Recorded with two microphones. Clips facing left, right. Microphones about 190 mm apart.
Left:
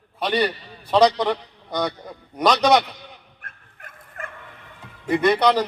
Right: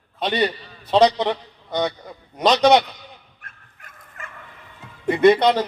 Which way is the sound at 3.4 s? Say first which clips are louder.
Left 3 dB; 55° left (ahead or behind).